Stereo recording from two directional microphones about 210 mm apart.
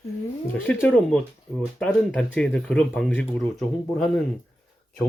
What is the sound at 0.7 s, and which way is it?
Speech, 5° left (ahead or behind).